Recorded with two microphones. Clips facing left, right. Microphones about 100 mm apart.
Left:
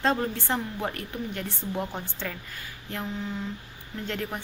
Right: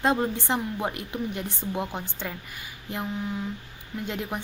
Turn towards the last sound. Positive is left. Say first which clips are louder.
# right 1 dB
turn(degrees=-15)  # may be behind; listen again after turning